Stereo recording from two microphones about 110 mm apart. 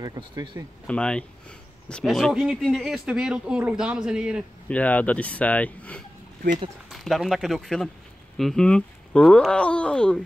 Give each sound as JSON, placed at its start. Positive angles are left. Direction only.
{"t": 0.0, "sound": "speech", "side_deg": -35}
{"t": 0.8, "sound": "speech", "side_deg": 10}
{"t": 4.6, "sound": "speech", "side_deg": 15}
{"t": 6.9, "sound": "speech", "side_deg": 0}